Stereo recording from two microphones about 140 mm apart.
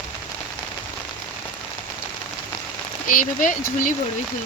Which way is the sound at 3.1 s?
70° left (ahead or behind).